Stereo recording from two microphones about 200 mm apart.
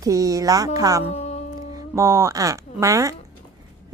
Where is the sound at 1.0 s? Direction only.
30° left (ahead or behind).